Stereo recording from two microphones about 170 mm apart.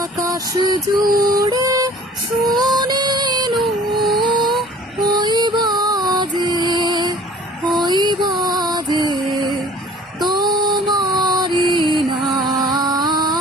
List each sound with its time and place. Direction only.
0.0 s music: 20° right (ahead or behind)
3.6 s music: centre (ahead or behind)
4.2 s a sound: 25° right (ahead or behind)
5.2 s music: 25° right (ahead or behind)
10.2 s music: 25° right (ahead or behind)
12.2 s music: centre (ahead or behind)
12.7 s music: 25° right (ahead or behind)